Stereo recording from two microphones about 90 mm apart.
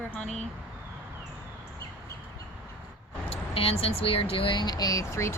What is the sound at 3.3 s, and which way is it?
Speech, 90° left.